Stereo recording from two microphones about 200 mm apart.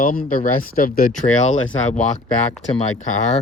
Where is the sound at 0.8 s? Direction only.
45° left (ahead or behind).